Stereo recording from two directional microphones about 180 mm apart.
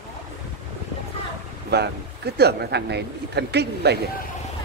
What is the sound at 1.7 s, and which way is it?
Speech, 65° right (ahead or behind).